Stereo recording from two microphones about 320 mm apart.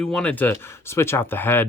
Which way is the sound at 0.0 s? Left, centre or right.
Centre.